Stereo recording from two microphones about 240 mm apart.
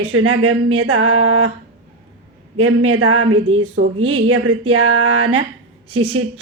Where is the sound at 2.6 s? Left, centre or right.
Right.